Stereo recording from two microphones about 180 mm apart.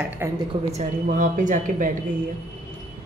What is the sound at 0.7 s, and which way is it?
Speech, 45° right (ahead or behind).